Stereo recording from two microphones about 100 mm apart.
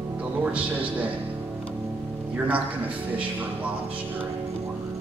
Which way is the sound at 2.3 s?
15° right (ahead or behind).